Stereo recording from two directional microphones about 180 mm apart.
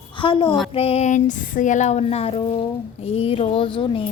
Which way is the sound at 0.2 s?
25° left (ahead or behind).